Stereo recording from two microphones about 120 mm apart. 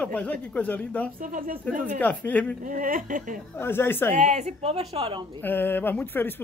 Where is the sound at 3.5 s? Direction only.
20° left (ahead or behind).